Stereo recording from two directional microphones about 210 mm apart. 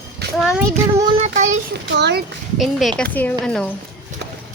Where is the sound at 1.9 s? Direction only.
55° right (ahead or behind).